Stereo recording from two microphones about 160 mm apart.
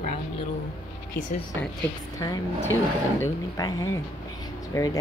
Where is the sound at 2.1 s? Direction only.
20° left (ahead or behind).